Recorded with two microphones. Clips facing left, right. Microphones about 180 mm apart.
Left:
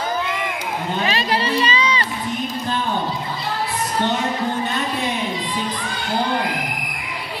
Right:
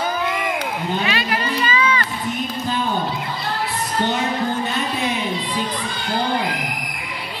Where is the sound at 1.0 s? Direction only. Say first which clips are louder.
Left 2 dB; 35° left (ahead or behind).